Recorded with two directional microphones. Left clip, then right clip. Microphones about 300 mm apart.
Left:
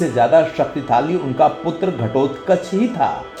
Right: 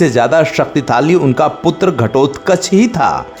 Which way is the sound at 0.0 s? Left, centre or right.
Right.